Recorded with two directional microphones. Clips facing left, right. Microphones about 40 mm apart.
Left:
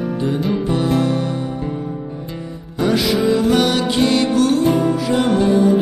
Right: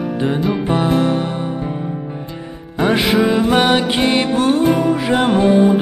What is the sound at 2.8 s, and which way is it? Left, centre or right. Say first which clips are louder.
Music: right 2 dB; right.